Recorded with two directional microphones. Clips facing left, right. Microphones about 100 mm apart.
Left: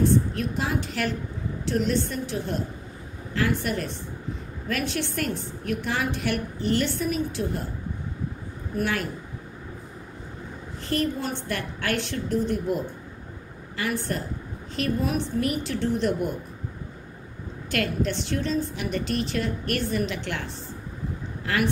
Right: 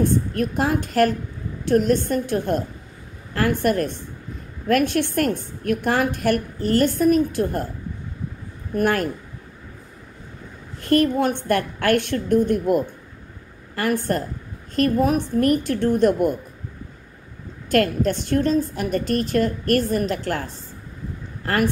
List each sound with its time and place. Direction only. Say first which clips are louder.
0.0 s a woman's voice: right 2 dB; 50° right (ahead or behind)
8.7 s a woman's voice: right 7 dB; 50° right (ahead or behind)
10.8 s a woman's voice: right 9 dB; 55° right (ahead or behind)
17.6 s a woman's voice: right 7 dB; 45° right (ahead or behind)